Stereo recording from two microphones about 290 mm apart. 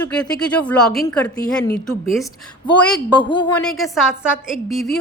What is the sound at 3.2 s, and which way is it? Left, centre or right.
Speech, centre.